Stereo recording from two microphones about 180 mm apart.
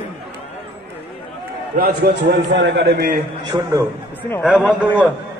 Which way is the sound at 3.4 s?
20° right (ahead or behind).